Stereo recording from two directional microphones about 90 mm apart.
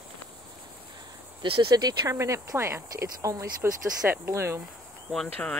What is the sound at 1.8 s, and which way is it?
Speech, 45° right (ahead or behind).